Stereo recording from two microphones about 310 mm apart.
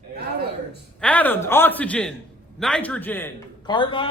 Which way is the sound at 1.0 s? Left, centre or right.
Centre.